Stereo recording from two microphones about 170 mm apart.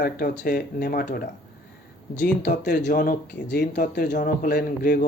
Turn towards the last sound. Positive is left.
turn(degrees=55)  # may be behind; listen again after turning